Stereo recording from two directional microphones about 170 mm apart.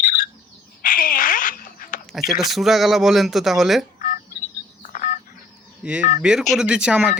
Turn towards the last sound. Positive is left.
turn(degrees=-5)  # may be behind; listen again after turning